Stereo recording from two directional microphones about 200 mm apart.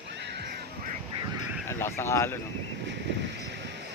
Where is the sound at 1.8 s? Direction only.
10° left (ahead or behind).